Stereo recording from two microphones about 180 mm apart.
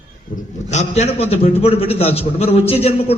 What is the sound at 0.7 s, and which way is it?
A man's voice, 40° left (ahead or behind).